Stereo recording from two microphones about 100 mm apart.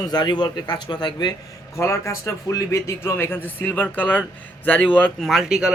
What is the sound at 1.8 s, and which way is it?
Speech, 30° left (ahead or behind).